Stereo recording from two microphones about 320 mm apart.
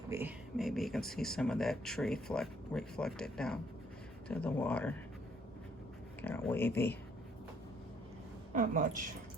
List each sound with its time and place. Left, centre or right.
0.1 s speech: centre
6.2 s speech: centre
8.5 s a woman's voice: right